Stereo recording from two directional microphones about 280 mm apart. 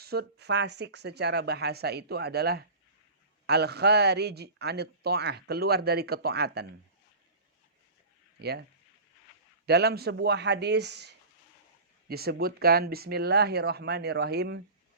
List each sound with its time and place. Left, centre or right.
0.0 s a man's voice: right
8.4 s speech: right
9.6 s a man's voice: right